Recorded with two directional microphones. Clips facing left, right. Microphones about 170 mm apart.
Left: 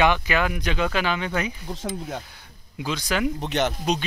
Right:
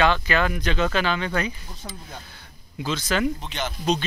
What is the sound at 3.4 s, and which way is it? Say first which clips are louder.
Speech: left 7 dB; 65° left (ahead or behind).